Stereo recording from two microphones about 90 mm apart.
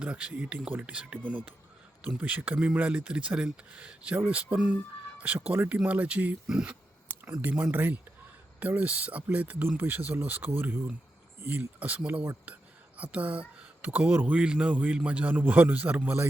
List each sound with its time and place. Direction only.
0.0 s speech: 10° right (ahead or behind)